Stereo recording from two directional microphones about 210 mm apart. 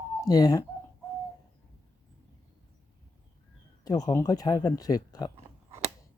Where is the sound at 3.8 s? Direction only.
15° left (ahead or behind).